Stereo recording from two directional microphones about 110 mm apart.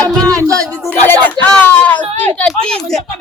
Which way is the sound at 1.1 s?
15° left (ahead or behind).